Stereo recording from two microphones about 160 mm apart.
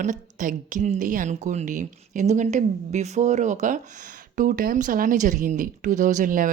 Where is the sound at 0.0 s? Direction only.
55° right (ahead or behind).